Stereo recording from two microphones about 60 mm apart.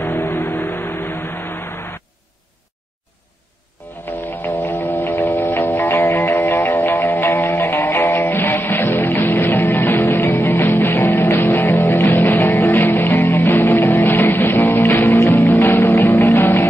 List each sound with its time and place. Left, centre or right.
0.0 s vehicle: left
4.3 s music: left
10.2 s music: left